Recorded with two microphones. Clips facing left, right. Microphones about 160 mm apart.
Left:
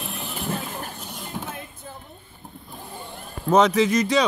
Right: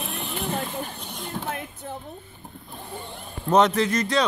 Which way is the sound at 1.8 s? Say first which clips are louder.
Right 5 dB; 70° right (ahead or behind).